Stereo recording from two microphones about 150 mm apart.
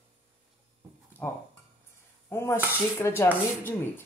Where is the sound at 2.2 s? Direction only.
15° left (ahead or behind).